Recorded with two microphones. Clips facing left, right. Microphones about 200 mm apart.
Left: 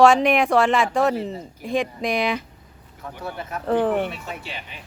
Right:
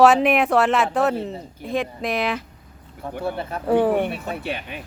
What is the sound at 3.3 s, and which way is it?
Speech, 30° right (ahead or behind).